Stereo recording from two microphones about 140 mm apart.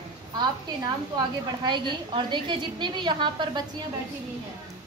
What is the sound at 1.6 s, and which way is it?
A woman's voice, 35° right (ahead or behind).